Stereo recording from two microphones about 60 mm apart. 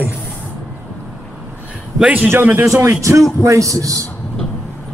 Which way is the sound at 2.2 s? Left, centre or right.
Right.